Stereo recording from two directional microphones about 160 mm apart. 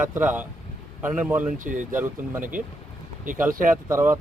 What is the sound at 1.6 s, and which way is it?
Speech, 55° right (ahead or behind).